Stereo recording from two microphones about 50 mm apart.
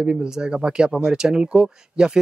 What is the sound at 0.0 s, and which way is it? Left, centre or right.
Speech, centre.